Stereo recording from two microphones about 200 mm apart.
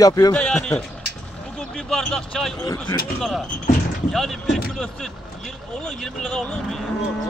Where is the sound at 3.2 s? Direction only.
Centre (ahead or behind).